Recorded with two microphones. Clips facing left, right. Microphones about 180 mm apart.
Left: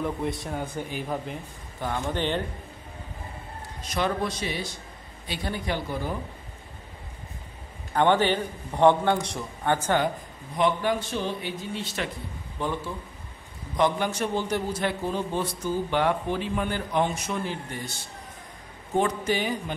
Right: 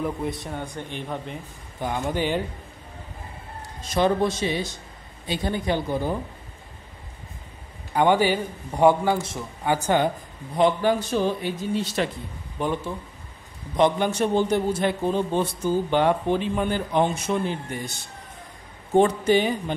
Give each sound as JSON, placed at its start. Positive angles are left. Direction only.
{"t": 0.0, "sound": "speech", "side_deg": 0}
{"t": 1.8, "sound": "a man's voice", "side_deg": -15}
{"t": 3.9, "sound": "a man's voice", "side_deg": -25}
{"t": 7.9, "sound": "a man's voice", "side_deg": -10}
{"t": 10.5, "sound": "a man's voice", "side_deg": -30}
{"t": 12.5, "sound": "a man's voice", "side_deg": -15}
{"t": 18.9, "sound": "a man's voice", "side_deg": -30}